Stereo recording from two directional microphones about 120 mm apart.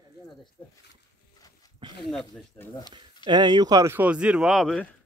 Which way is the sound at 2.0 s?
Centre (ahead or behind).